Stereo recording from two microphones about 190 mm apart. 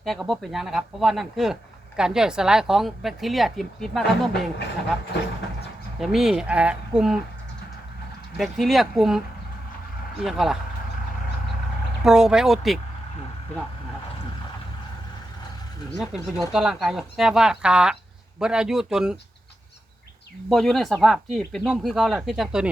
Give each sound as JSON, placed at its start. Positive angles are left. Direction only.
{"t": 0.0, "sound": "a woman's voice", "side_deg": 0}
{"t": 4.0, "sound": "speech", "side_deg": 60}
{"t": 6.0, "sound": "a woman's voice", "side_deg": 0}
{"t": 8.4, "sound": "a woman's voice", "side_deg": 0}
{"t": 12.0, "sound": "a woman's voice", "side_deg": -5}
{"t": 16.0, "sound": "a woman's voice", "side_deg": 0}
{"t": 20.5, "sound": "a woman's voice", "side_deg": 0}